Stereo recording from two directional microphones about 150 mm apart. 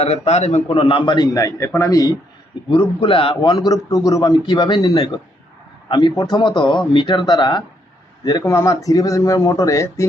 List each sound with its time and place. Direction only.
0.0 s a man's voice: 45° left (ahead or behind); by 2.1 s 25° left (ahead or behind)
2.6 s a man's voice: 35° left (ahead or behind); by 10.1 s 20° left (ahead or behind)